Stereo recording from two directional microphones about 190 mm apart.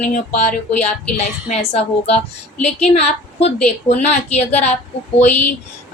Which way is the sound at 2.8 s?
35° left (ahead or behind).